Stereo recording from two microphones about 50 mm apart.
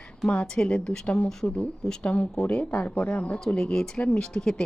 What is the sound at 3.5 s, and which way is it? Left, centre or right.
Speech, centre.